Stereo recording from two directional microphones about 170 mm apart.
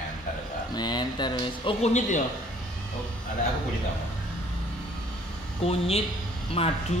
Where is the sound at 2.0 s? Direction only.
45° left (ahead or behind).